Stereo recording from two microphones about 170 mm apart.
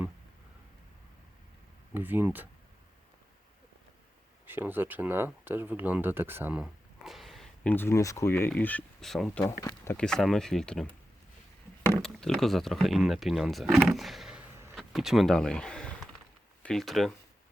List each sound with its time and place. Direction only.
1.9 s speech: 10° right (ahead or behind)
4.4 s speech: 10° right (ahead or behind)
9.6 s speech: 15° left (ahead or behind)
10.0 s speech: 5° left (ahead or behind)
12.0 s speech: 5° left (ahead or behind)